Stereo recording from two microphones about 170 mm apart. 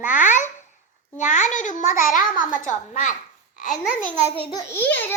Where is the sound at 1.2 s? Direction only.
50° left (ahead or behind).